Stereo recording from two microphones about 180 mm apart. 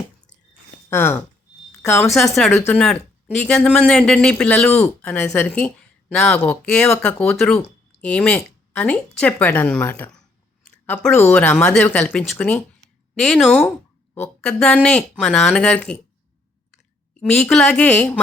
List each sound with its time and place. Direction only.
0.9 s speech: 15° left (ahead or behind)
2.0 s speech: centre (ahead or behind)
2.5 s speech: 15° left (ahead or behind)
2.7 s speech: 5° left (ahead or behind)
17.2 s speech: 5° left (ahead or behind)